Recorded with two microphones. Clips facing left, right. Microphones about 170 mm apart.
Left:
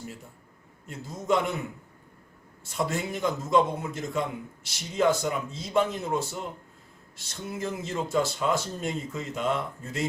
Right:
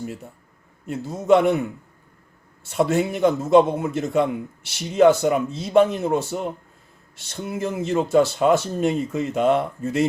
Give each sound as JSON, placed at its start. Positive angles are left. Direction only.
{"t": 0.9, "sound": "a man's voice", "side_deg": -65}
{"t": 2.6, "sound": "a man's voice", "side_deg": -65}